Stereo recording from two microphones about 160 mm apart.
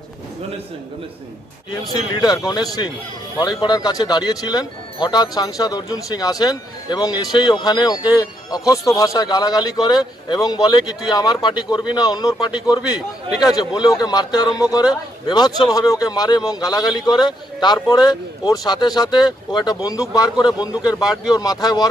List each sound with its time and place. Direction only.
1.7 s a man's voice: 25° left (ahead or behind)